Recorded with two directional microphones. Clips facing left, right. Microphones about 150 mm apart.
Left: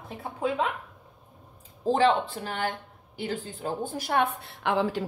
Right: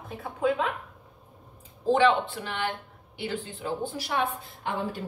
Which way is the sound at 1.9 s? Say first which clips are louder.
Right 1 dB; 40° left (ahead or behind).